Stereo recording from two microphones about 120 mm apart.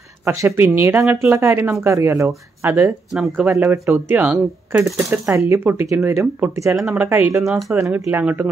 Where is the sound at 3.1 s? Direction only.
Centre (ahead or behind).